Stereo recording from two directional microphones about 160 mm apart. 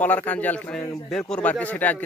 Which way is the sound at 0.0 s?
10° left (ahead or behind).